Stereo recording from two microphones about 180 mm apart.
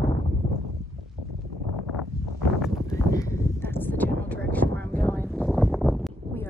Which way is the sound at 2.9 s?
15° left (ahead or behind).